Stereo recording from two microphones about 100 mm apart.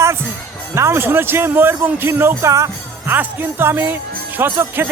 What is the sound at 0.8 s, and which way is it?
Speech, 25° right (ahead or behind).